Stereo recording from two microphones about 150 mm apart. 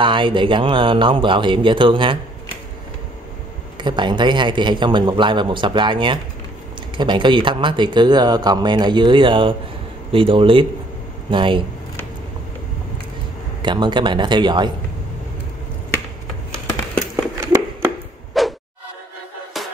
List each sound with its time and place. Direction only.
0.0 s speech: 35° right (ahead or behind)
3.7 s speech: 30° right (ahead or behind)
13.6 s speech: 30° right (ahead or behind)
17.4 s a sound: 20° right (ahead or behind)
18.4 s music: centre (ahead or behind)